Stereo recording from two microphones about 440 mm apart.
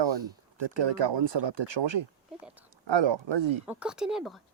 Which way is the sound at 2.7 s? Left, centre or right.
Right.